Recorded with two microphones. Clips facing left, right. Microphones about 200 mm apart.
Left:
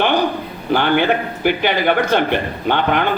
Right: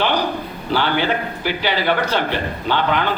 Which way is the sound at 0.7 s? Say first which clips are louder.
Left 4 dB; 55° left (ahead or behind).